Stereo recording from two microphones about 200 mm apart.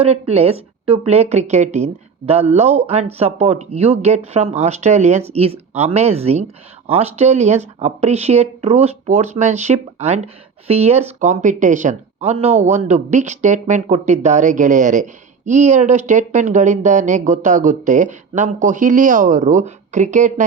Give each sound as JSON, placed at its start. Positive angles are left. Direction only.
{"t": 0.0, "sound": "speech", "side_deg": -30}